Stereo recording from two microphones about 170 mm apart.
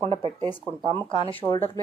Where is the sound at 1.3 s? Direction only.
15° left (ahead or behind).